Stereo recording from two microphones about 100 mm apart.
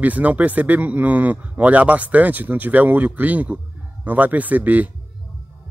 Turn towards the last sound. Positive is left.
turn(degrees=-15)  # may be behind; listen again after turning